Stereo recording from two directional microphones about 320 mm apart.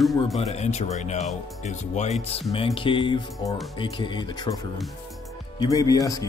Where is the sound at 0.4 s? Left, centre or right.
Centre.